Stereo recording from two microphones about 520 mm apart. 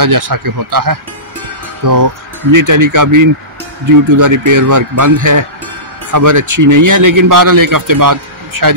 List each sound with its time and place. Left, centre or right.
0.0 s speech: right